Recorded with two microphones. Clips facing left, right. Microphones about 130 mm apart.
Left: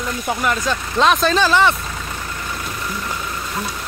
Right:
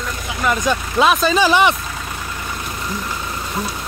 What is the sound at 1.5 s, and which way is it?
Speech, 15° right (ahead or behind).